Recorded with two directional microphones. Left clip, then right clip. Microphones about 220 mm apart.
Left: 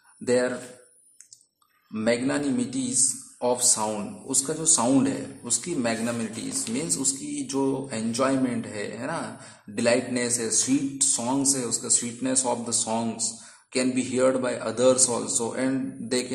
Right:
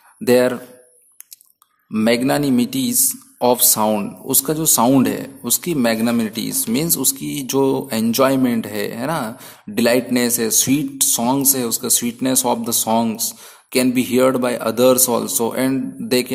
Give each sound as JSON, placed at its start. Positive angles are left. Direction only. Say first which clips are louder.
{"t": 0.2, "sound": "speech", "louder": "right 9 dB", "side_deg": -35}
{"t": 2.0, "sound": "speech", "louder": "right 8 dB", "side_deg": -35}